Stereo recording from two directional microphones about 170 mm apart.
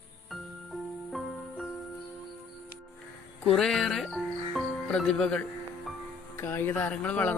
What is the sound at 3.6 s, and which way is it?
Music, 5° left (ahead or behind).